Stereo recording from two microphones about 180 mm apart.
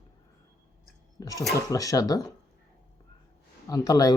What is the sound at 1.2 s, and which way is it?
Speech, 20° left (ahead or behind).